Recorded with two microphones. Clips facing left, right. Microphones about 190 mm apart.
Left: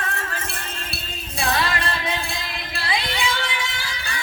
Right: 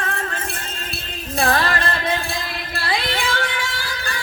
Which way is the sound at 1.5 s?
45° right (ahead or behind).